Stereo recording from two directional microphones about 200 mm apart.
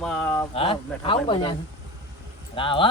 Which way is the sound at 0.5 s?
25° left (ahead or behind).